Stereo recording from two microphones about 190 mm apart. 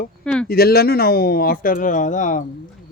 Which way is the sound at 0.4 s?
55° left (ahead or behind).